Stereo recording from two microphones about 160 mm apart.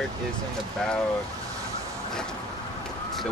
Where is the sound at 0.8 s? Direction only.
5° left (ahead or behind).